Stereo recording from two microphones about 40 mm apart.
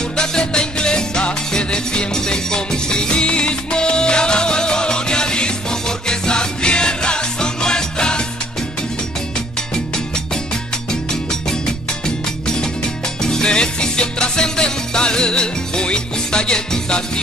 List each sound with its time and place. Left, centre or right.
0.2 s music: centre
13.2 s music: centre